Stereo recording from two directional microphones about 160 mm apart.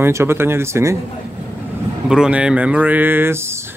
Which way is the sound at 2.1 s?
5° right (ahead or behind).